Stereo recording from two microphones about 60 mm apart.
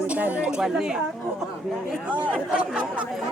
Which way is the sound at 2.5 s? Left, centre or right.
Centre.